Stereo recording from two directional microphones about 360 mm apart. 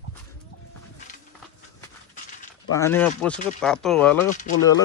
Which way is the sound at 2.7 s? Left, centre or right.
Centre.